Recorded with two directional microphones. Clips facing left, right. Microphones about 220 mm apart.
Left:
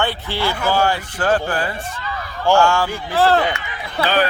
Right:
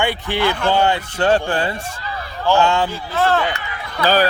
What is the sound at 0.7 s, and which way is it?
Speech, 20° right (ahead or behind).